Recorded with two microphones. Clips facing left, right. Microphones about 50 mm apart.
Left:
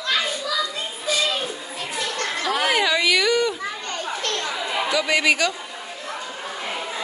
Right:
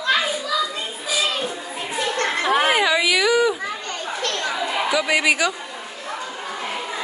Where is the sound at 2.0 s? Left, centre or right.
Right.